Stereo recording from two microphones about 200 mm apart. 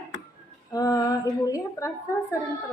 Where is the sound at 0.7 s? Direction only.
15° left (ahead or behind).